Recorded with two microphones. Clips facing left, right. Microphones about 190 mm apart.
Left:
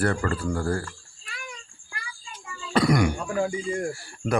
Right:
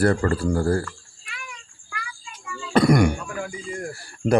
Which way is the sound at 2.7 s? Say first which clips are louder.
Right 4 dB; 50° right (ahead or behind).